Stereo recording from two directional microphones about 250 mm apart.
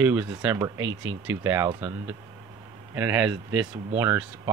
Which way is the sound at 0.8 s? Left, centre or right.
Right.